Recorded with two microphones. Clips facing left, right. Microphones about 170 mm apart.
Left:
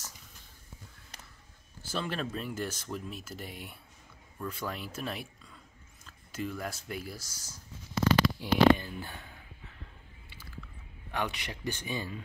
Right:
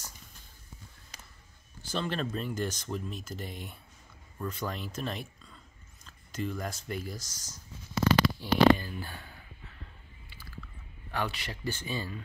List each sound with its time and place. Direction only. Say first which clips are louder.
1.8 s speech: right 2 dB; 5° left (ahead or behind)
8.4 s speech: even; 20° left (ahead or behind)
11.1 s speech: even; 20° left (ahead or behind)